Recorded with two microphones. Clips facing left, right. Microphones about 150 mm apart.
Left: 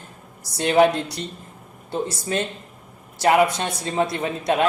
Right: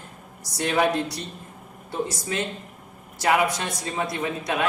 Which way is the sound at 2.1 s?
30° left (ahead or behind).